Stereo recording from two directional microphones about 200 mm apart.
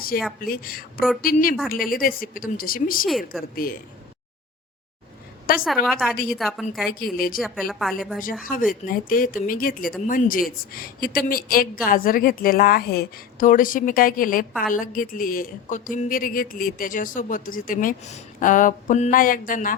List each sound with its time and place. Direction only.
0.1 s a woman's voice: 45° left (ahead or behind)
0.9 s a woman's voice: centre (ahead or behind)
1.2 s a woman's voice: 45° left (ahead or behind)
3.1 s a woman's voice: centre (ahead or behind)
3.5 s a woman's voice: 45° left (ahead or behind)
5.5 s a woman's voice: centre (ahead or behind)
7.0 s a woman's voice: 45° left (ahead or behind)
7.7 s a woman's voice: centre (ahead or behind)
8.2 s a woman's voice: 45° left (ahead or behind)